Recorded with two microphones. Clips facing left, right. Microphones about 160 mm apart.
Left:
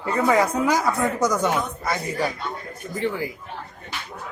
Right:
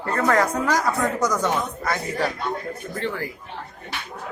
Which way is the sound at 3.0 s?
15° left (ahead or behind).